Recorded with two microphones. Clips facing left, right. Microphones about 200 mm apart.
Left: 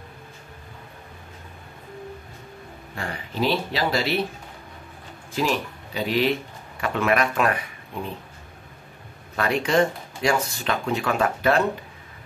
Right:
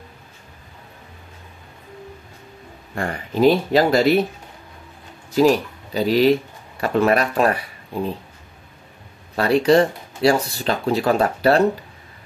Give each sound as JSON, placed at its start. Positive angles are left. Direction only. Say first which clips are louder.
{"t": 3.0, "sound": "speech", "louder": "right 9 dB", "side_deg": -50}
{"t": 5.3, "sound": "speech", "louder": "right 9 dB", "side_deg": -40}
{"t": 9.4, "sound": "speech", "louder": "right 6 dB", "side_deg": -35}